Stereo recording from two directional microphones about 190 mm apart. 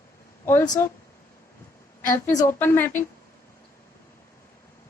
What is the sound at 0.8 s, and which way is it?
Speech, 15° left (ahead or behind).